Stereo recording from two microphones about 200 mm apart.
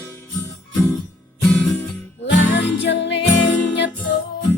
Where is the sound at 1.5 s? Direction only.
5° left (ahead or behind).